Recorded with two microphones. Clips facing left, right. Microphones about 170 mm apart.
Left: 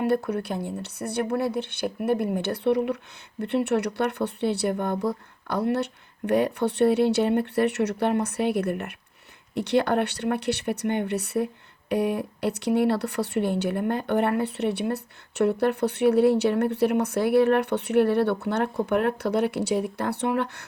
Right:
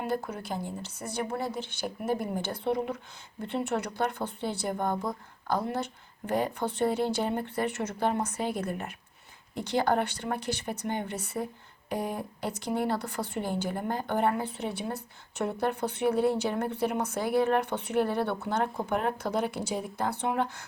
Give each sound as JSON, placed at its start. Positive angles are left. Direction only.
{"t": 0.0, "sound": "speech", "side_deg": 65}